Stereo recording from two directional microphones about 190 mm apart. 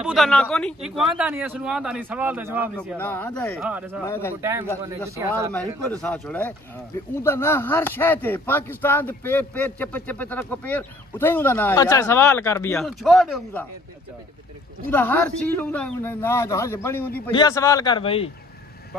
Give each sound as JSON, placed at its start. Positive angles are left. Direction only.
{"t": 0.0, "sound": "speech", "side_deg": 0}
{"t": 3.0, "sound": "speech", "side_deg": 10}
{"t": 3.5, "sound": "speech", "side_deg": -5}
{"t": 4.0, "sound": "speech", "side_deg": 10}
{"t": 4.4, "sound": "speech", "side_deg": -15}
{"t": 5.5, "sound": "speech", "side_deg": 5}
{"t": 12.8, "sound": "speech", "side_deg": 0}
{"t": 14.9, "sound": "a man's voice", "side_deg": 10}